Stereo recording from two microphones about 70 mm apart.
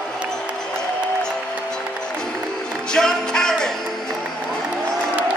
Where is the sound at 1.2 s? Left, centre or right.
Centre.